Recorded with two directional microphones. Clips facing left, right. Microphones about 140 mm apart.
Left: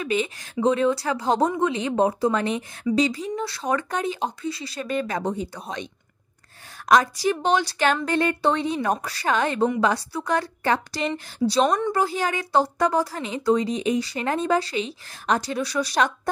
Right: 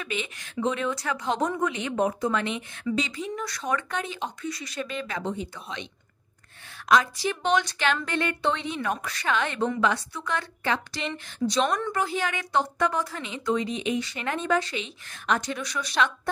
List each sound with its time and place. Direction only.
0.0 s a woman's voice: 35° left (ahead or behind)
6.9 s a woman's voice: 40° left (ahead or behind)